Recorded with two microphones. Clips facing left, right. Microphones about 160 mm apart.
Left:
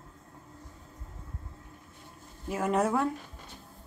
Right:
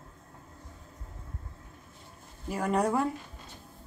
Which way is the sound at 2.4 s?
Centre (ahead or behind).